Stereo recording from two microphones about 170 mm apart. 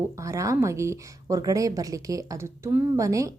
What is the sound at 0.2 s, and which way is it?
A woman's voice, 20° right (ahead or behind).